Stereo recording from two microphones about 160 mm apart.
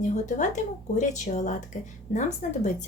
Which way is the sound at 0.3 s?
50° left (ahead or behind).